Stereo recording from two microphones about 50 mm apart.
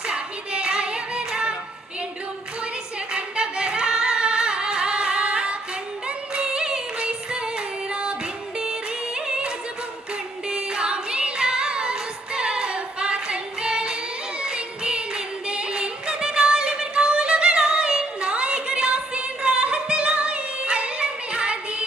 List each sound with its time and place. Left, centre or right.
0.1 s singing: centre
3.1 s singing: centre
6.1 s music: centre